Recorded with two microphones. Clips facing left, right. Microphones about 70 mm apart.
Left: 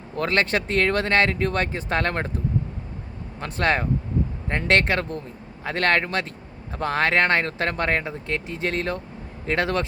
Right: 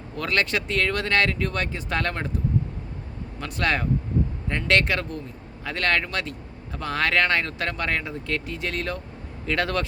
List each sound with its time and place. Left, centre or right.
0.2 s speech: left
3.4 s speech: left